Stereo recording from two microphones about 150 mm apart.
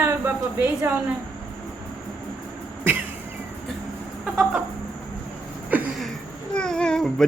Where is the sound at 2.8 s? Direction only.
10° right (ahead or behind).